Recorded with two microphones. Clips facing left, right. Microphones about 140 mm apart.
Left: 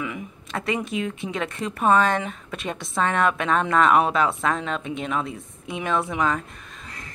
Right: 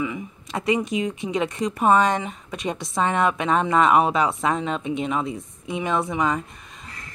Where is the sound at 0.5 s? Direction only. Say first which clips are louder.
Right 4 dB; 15° right (ahead or behind).